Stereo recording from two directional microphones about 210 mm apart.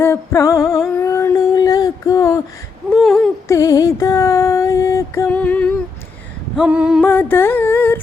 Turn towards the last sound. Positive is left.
turn(degrees=10)  # may be behind; listen again after turning